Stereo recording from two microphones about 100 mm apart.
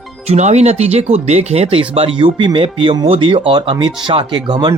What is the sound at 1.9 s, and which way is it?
Speech, 60° right (ahead or behind).